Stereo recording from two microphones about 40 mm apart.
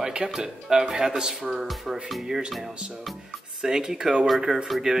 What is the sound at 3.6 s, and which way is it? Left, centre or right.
Speech, centre.